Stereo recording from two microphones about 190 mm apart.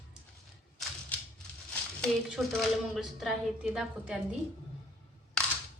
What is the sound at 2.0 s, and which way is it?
A woman's voice, centre (ahead or behind).